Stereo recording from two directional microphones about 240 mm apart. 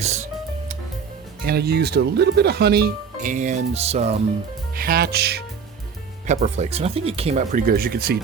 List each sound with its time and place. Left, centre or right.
0.0 s speech: right
1.4 s speech: right
4.7 s speech: right
6.2 s speech: right